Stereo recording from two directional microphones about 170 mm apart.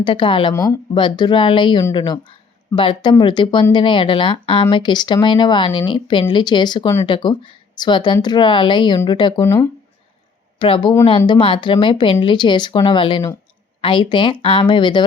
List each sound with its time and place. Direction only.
0.0 s speech: 30° left (ahead or behind)
9.4 s speech: 15° left (ahead or behind)
10.6 s speech: 30° left (ahead or behind)